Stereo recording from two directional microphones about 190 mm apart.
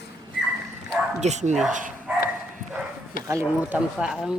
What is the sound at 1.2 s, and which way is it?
Speech, 35° right (ahead or behind).